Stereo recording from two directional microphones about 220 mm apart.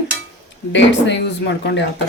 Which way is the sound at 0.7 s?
55° left (ahead or behind).